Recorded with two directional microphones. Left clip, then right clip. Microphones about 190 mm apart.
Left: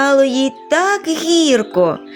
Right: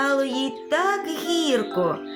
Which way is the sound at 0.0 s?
40° left (ahead or behind).